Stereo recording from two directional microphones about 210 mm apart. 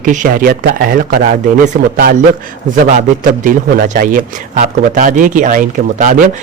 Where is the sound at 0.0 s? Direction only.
40° right (ahead or behind).